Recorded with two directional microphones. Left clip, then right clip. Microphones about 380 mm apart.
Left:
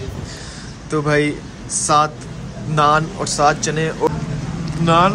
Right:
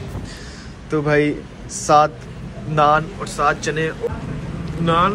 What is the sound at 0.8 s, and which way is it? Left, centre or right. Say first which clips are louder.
A man's voice: even; centre.